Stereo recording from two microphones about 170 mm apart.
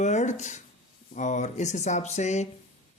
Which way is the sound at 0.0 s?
45° left (ahead or behind).